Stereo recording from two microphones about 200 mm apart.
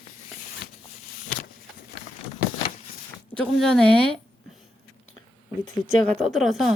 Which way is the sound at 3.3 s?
Centre (ahead or behind).